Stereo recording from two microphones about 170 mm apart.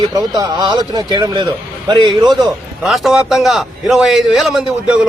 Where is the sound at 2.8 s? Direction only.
Centre (ahead or behind).